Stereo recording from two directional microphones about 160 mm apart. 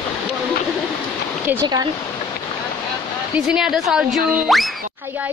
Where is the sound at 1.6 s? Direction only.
25° right (ahead or behind).